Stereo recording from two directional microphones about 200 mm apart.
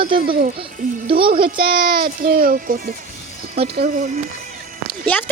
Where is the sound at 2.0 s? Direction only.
50° right (ahead or behind).